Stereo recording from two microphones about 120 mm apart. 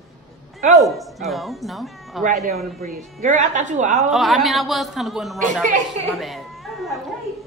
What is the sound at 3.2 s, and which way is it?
Speech, 90° right.